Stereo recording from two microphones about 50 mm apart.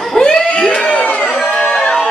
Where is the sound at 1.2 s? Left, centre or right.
Centre.